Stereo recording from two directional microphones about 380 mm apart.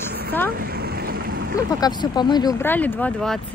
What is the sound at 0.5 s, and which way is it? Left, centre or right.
Vehicle, right.